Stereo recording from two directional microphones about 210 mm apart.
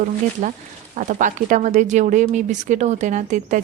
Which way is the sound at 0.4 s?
35° right (ahead or behind).